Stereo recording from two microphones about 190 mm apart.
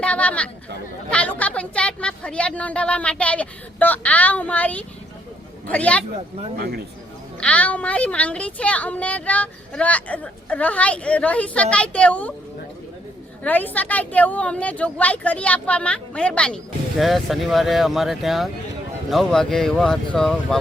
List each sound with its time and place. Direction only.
0.0 s chatter: 5° left (ahead or behind)
1.1 s a woman's voice: 5° left (ahead or behind)
6.6 s speech: 55° right (ahead or behind)
7.3 s speech: 5° left (ahead or behind)
13.4 s speech: 10° left (ahead or behind)